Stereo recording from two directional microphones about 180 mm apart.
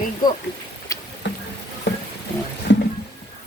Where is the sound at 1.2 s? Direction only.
75° left (ahead or behind).